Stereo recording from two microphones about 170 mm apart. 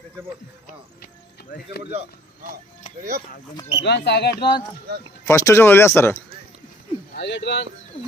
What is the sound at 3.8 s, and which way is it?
Speech, 80° left.